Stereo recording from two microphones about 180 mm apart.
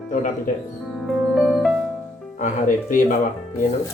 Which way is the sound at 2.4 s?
45° left (ahead or behind).